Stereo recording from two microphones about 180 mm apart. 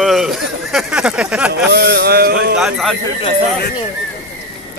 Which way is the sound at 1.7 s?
60° right (ahead or behind).